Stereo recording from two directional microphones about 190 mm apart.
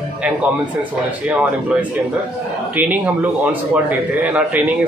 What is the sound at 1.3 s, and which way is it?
Speech, 10° right (ahead or behind).